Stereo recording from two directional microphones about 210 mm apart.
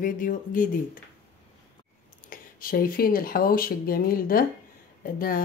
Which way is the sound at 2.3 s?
45° left (ahead or behind).